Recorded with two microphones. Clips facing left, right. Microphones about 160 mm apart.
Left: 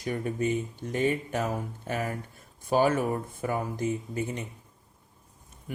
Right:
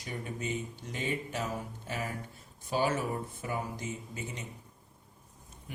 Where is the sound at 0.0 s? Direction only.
50° left (ahead or behind).